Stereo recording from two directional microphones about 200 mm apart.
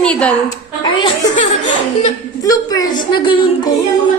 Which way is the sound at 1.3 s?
35° left (ahead or behind).